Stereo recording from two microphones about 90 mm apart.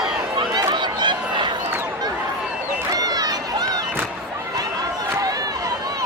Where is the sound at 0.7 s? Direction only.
60° right (ahead or behind).